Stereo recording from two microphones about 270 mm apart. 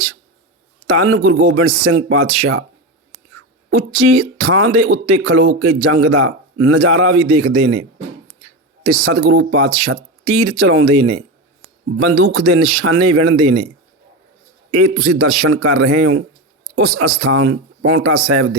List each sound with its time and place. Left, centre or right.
0.9 s speech: right
4.1 s speech: right
9.1 s speech: right
14.7 s speech: right